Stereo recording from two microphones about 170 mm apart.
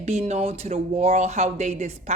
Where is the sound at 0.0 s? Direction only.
40° right (ahead or behind).